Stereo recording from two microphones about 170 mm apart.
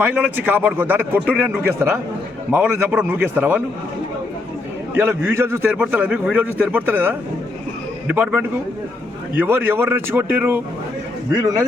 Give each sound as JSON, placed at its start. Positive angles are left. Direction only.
{"t": 0.0, "sound": "a man's voice", "side_deg": -10}
{"t": 4.9, "sound": "a man's voice", "side_deg": -15}